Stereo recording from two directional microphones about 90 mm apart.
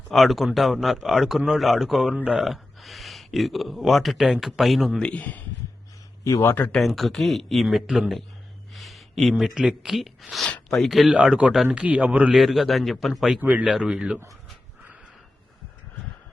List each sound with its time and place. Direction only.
0.1 s speech: centre (ahead or behind)
2.1 s speech: 15° right (ahead or behind)
2.4 s speech: centre (ahead or behind)
5.0 s speech: 15° left (ahead or behind)
6.2 s speech: 30° left (ahead or behind)
6.7 s speech: 5° left (ahead or behind)
10.5 s a sound: 10° left (ahead or behind)
10.8 s speech: centre (ahead or behind)
12.4 s speech: centre (ahead or behind)
13.4 s speech: 20° right (ahead or behind)
13.7 s speech: 5° right (ahead or behind)